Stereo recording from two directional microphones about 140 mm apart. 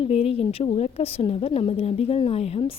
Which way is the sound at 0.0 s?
45° left (ahead or behind).